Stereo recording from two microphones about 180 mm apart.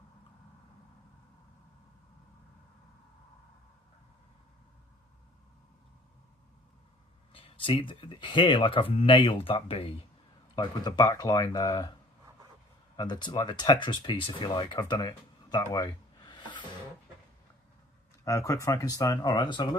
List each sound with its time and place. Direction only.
7.3 s speech: 30° left (ahead or behind)
13.0 s speech: 25° left (ahead or behind)
18.3 s speech: 20° left (ahead or behind)